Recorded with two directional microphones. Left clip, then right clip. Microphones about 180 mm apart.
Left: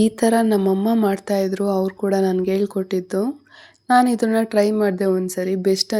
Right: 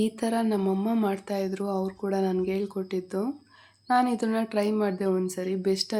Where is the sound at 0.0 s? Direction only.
35° left (ahead or behind).